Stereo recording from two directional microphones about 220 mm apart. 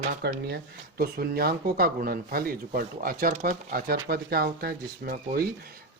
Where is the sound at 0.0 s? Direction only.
45° right (ahead or behind).